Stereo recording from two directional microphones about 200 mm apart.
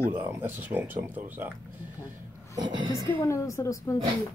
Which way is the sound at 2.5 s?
20° right (ahead or behind).